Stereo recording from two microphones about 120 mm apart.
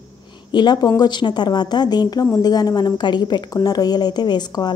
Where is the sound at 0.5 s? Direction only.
35° left (ahead or behind).